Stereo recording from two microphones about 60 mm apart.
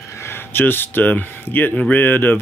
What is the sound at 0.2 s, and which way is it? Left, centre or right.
Speech, left.